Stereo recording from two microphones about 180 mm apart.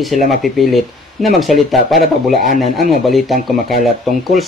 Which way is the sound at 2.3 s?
50° right (ahead or behind).